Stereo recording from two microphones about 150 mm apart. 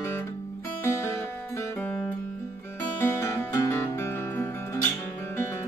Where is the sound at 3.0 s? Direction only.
15° left (ahead or behind).